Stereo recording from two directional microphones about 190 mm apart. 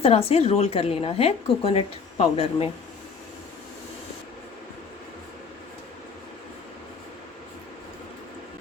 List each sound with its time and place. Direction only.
0.0 s a woman's voice: 30° left (ahead or behind)